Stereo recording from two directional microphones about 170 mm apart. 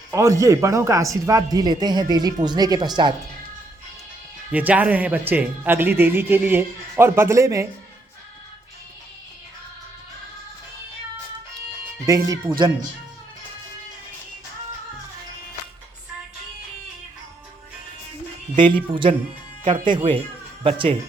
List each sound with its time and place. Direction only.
0.1 s speech: 20° right (ahead or behind)
4.5 s speech: 10° right (ahead or behind)
12.0 s speech: 20° right (ahead or behind)
18.5 s speech: 30° right (ahead or behind)